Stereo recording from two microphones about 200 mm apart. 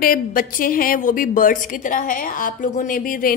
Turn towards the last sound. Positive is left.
turn(degrees=45)  # may be behind; listen again after turning